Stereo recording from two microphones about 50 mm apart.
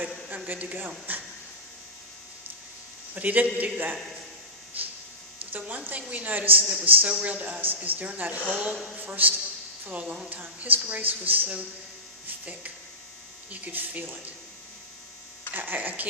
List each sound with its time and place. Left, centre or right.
0.3 s a man's voice: right
3.2 s a woman's voice: right
4.8 s a sound: right
5.5 s a woman's voice: right
9.0 s a woman's voice: right
13.5 s a woman's voice: right
15.5 s a woman's voice: right